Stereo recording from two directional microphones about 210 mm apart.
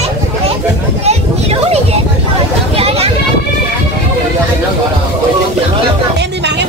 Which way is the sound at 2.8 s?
30° right (ahead or behind).